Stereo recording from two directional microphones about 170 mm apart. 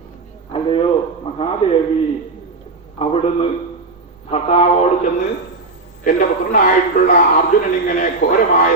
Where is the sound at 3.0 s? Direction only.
35° left (ahead or behind).